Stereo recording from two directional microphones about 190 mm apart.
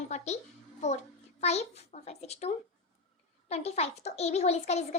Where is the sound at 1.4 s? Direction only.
35° left (ahead or behind).